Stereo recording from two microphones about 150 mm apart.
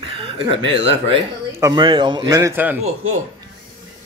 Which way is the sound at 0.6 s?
35° right (ahead or behind).